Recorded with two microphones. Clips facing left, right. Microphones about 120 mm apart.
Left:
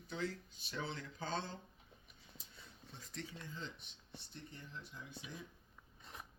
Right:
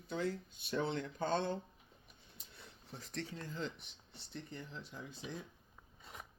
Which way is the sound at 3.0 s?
75° right (ahead or behind).